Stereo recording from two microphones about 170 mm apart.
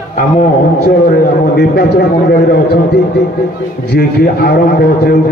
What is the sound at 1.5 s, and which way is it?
A man's voice, 70° left (ahead or behind).